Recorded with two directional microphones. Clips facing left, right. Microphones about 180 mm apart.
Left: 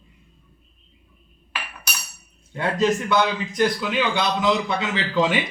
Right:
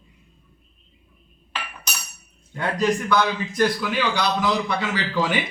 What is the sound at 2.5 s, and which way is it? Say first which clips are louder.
A man's voice: left 1 dB; 25° left (ahead or behind).